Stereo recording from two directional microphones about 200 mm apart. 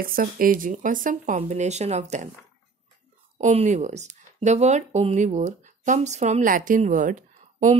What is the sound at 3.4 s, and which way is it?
Speech, 35° right (ahead or behind).